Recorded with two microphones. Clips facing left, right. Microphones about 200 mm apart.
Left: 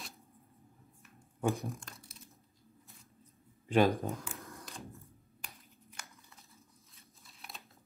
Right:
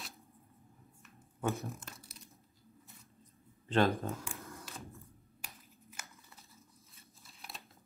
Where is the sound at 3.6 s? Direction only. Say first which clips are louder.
Left 2 dB; 15° left (ahead or behind).